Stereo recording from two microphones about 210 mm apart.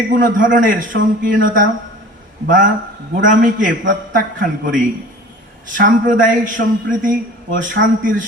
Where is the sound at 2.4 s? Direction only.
40° right (ahead or behind).